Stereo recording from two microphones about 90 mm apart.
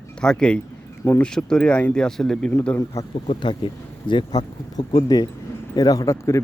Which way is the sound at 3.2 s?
65° left (ahead or behind).